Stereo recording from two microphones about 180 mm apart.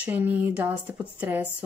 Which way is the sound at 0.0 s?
10° right (ahead or behind).